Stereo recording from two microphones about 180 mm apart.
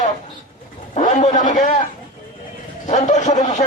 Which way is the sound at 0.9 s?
40° left (ahead or behind).